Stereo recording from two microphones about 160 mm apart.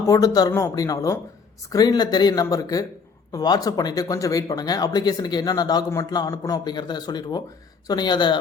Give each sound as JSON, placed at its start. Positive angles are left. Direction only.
{"t": 0.0, "sound": "speech", "side_deg": 20}